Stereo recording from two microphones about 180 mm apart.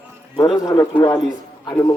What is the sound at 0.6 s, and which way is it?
Speech, 20° left (ahead or behind).